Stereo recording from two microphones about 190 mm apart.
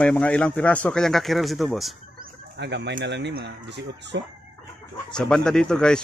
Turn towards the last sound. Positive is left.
turn(degrees=5)  # may be behind; listen again after turning